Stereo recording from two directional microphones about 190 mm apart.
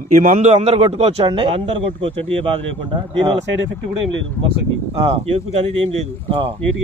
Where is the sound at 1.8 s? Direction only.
80° right.